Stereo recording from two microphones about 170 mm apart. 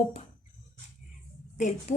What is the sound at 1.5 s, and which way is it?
Speech, 45° left (ahead or behind).